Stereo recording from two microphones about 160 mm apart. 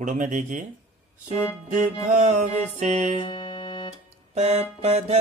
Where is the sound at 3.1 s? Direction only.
30° left (ahead or behind).